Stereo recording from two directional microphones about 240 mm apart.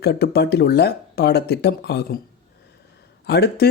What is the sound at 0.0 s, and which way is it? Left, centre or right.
Speech, left.